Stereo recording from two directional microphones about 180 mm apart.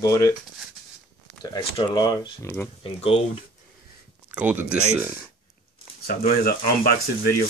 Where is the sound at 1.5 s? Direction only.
25° left (ahead or behind).